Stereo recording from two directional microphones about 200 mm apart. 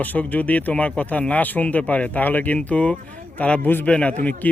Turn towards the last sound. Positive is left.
turn(degrees=10)  # may be behind; listen again after turning